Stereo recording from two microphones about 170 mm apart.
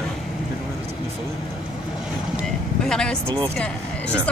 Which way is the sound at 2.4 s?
5° left (ahead or behind).